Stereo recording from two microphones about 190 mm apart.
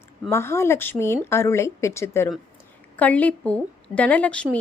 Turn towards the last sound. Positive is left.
turn(degrees=5)  # may be behind; listen again after turning